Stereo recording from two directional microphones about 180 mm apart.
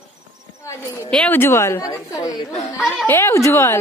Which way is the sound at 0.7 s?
15° left (ahead or behind).